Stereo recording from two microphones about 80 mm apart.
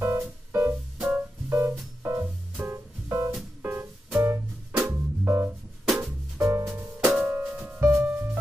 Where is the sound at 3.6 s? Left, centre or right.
Right.